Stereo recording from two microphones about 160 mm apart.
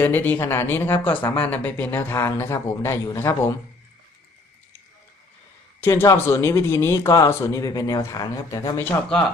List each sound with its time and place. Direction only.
0.0 s speech: 15° left (ahead or behind)
5.8 s speech: 15° left (ahead or behind)